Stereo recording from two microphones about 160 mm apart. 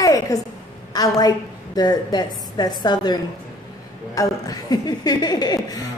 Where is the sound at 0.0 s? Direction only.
20° left (ahead or behind).